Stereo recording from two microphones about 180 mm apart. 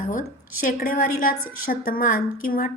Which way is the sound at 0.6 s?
50° left (ahead or behind).